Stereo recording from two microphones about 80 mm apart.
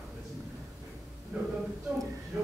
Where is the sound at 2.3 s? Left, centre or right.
Centre.